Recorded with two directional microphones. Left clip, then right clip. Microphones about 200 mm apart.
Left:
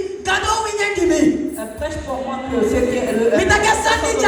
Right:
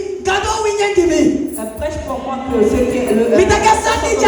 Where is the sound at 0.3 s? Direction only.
20° left (ahead or behind).